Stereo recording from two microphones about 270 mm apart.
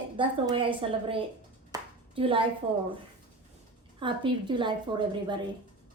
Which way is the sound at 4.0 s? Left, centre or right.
Centre.